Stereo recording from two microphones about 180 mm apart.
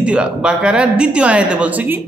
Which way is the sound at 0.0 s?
5° right (ahead or behind).